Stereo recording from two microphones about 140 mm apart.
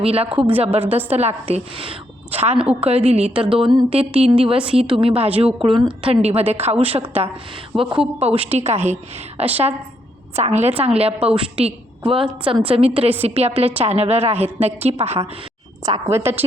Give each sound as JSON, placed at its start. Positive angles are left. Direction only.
{"t": 0.0, "sound": "a woman's voice", "side_deg": -45}
{"t": 15.8, "sound": "a woman's voice", "side_deg": -25}